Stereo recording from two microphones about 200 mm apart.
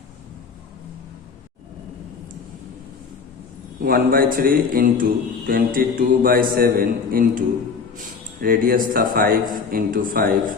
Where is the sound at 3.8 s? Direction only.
50° right (ahead or behind).